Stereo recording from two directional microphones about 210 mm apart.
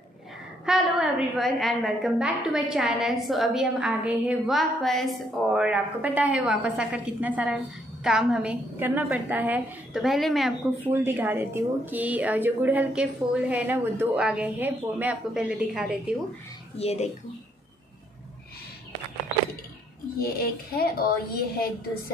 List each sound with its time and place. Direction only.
0.7 s a woman's voice: centre (ahead or behind)
16.7 s speech: 30° left (ahead or behind)
20.2 s a woman's voice: 45° left (ahead or behind)